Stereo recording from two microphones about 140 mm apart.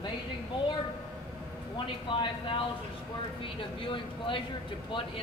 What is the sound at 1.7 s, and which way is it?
Speech, 35° left (ahead or behind).